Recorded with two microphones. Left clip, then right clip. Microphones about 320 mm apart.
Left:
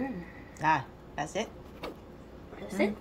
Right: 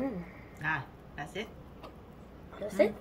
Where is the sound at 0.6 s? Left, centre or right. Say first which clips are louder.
Left 7 dB; centre.